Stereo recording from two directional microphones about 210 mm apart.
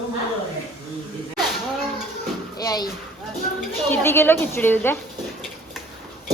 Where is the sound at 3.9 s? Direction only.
10° left (ahead or behind).